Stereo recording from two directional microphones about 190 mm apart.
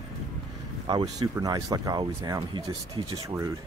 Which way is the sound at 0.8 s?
25° right (ahead or behind).